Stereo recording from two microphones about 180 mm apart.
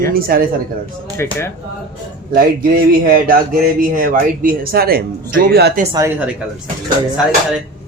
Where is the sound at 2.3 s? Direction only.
55° right (ahead or behind).